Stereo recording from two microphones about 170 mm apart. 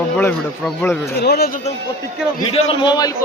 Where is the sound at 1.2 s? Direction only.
75° left (ahead or behind).